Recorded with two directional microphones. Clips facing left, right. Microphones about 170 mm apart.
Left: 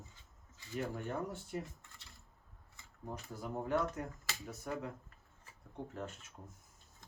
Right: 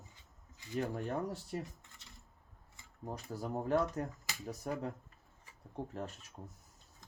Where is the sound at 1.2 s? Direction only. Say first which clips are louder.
Right 2 dB; 35° right (ahead or behind).